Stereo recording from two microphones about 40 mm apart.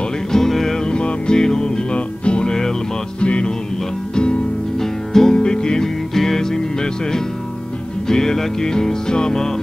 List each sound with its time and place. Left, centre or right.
0.3 s music: centre
0.7 s music: left
4.7 s music: centre